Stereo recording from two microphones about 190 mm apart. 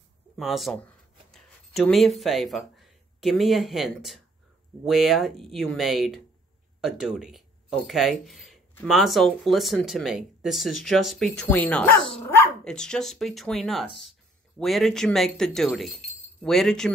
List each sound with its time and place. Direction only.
0.4 s speech: centre (ahead or behind)